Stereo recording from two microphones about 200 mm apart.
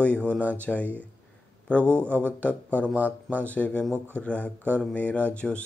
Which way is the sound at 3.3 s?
5° left (ahead or behind).